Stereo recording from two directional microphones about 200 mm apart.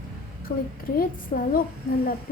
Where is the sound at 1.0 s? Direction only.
45° left (ahead or behind).